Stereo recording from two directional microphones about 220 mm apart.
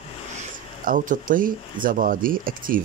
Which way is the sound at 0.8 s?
40° right (ahead or behind).